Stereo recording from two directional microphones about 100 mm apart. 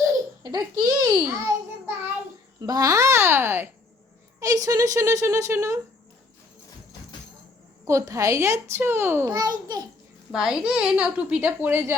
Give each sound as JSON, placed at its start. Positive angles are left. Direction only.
{"t": 0.4, "sound": "speech", "side_deg": -45}
{"t": 2.6, "sound": "a child's voice", "side_deg": -40}
{"t": 4.4, "sound": "speech", "side_deg": -35}
{"t": 7.9, "sound": "a child's voice", "side_deg": -30}
{"t": 9.3, "sound": "speech", "side_deg": -40}
{"t": 10.3, "sound": "a child's voice", "side_deg": -5}